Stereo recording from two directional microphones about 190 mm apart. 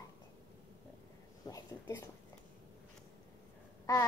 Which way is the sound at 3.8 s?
15° left (ahead or behind).